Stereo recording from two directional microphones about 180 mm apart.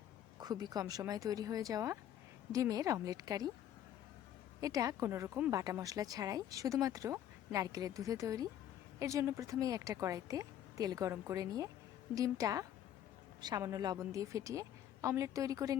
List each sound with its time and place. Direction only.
0.3 s speech: 20° right (ahead or behind)
4.6 s a woman's voice: 20° right (ahead or behind)